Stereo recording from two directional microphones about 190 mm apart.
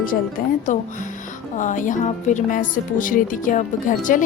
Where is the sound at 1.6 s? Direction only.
40° left (ahead or behind).